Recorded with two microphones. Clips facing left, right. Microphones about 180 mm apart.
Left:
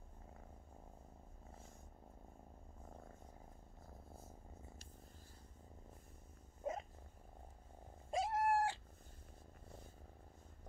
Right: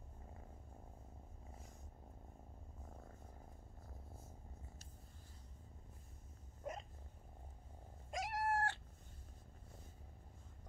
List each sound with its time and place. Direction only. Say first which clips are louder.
6.6 s cat: left 4 dB; 25° left (ahead or behind)
8.1 s cat: left 5 dB; 30° left (ahead or behind)
8.5 s cat: left 1 dB; 10° left (ahead or behind)